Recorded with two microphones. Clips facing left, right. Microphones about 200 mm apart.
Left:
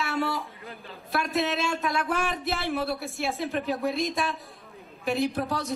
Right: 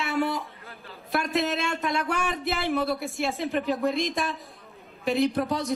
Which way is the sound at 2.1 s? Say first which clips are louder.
Right 1 dB; centre (ahead or behind).